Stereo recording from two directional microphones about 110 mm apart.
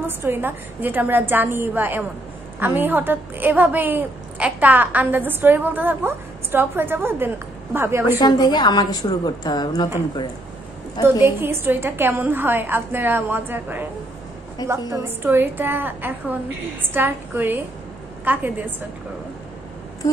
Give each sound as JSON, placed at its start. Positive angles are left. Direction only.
{"t": 0.0, "sound": "a woman's voice", "side_deg": -20}
{"t": 8.2, "sound": "a woman's voice", "side_deg": 40}
{"t": 11.1, "sound": "a woman's voice", "side_deg": -20}
{"t": 14.9, "sound": "a woman's voice", "side_deg": -20}